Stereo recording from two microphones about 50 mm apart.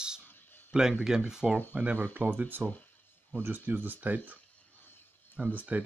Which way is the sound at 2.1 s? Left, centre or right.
Right.